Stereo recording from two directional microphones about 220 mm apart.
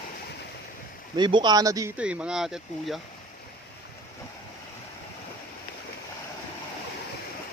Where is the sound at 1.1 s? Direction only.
20° right (ahead or behind).